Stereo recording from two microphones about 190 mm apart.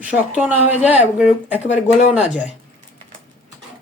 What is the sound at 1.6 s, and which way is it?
Speech, 35° left (ahead or behind).